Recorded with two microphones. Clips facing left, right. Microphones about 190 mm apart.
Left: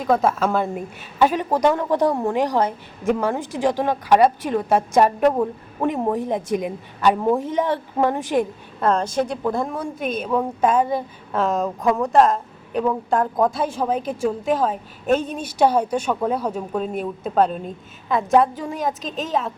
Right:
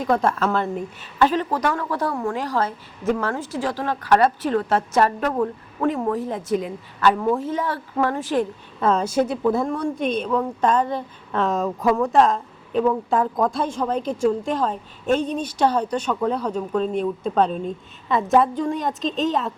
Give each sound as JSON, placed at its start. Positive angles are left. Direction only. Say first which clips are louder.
{"t": 0.0, "sound": "a woman's voice", "louder": "left 1 dB", "side_deg": 5}
{"t": 8.8, "sound": "a woman's voice", "louder": "right 1 dB", "side_deg": -5}